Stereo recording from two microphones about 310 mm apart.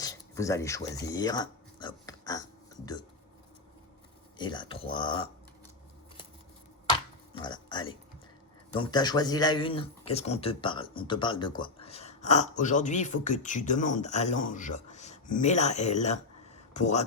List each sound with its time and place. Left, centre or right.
0.0 s speech: centre
4.4 s speech: centre
7.3 s speech: centre